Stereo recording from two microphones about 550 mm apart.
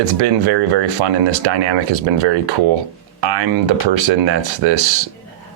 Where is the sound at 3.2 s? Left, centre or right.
Right.